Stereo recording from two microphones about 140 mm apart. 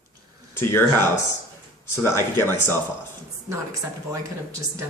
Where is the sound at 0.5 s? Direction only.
15° left (ahead or behind).